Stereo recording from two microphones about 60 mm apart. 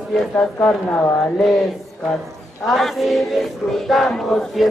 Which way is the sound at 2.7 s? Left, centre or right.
Centre.